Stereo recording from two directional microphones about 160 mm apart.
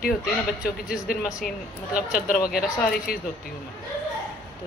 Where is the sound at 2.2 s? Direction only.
60° left (ahead or behind).